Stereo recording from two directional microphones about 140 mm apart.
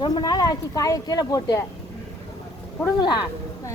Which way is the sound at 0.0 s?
30° left (ahead or behind).